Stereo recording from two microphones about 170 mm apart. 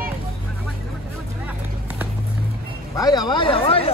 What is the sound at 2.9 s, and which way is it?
Speech, 25° left (ahead or behind).